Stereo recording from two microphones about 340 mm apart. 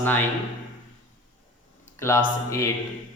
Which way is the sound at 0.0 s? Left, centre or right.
Centre.